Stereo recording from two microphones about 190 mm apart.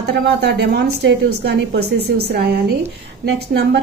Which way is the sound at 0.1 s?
60° right (ahead or behind).